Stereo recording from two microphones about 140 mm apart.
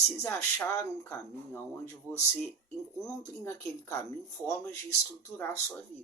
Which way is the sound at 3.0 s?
20° left (ahead or behind).